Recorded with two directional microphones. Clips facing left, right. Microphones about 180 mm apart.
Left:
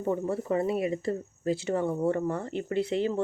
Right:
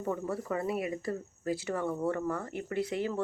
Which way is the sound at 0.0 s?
25° left (ahead or behind).